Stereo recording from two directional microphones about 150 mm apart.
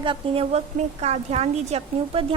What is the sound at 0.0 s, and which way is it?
A woman's voice, 35° right (ahead or behind).